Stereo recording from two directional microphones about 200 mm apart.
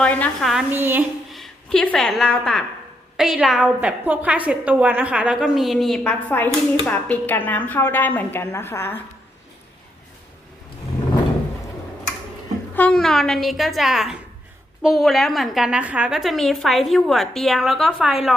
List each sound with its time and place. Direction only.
0.0 s a woman's voice: 5° left (ahead or behind)
0.5 s a woman's voice: 10° right (ahead or behind)
1.3 s a woman's voice: centre (ahead or behind)
12.7 s a woman's voice: 5° left (ahead or behind)